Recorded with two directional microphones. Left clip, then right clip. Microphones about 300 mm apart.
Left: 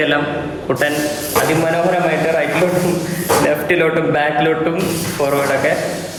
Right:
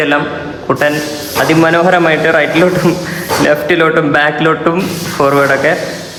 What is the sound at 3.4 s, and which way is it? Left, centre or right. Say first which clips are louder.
A man's voice: right 9 dB; centre.